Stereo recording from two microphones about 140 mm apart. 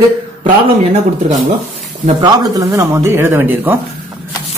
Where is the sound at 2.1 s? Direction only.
25° right (ahead or behind).